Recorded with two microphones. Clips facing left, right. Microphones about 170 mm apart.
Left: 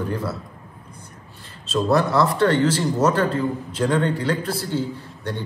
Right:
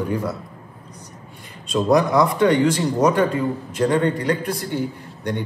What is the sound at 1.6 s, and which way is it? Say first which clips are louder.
A man's voice: right 2 dB; 15° right (ahead or behind).